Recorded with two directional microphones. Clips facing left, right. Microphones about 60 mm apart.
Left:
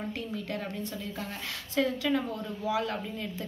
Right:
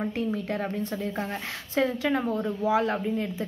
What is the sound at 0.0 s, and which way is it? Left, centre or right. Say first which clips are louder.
A woman's voice: right 7 dB; right.